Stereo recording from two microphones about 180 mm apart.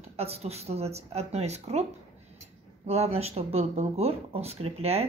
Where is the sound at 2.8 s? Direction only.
35° right (ahead or behind).